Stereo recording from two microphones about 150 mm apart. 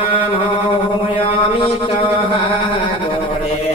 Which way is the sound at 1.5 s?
35° left (ahead or behind).